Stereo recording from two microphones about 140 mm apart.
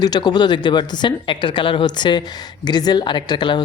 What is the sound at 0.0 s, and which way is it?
Speech, 30° left (ahead or behind).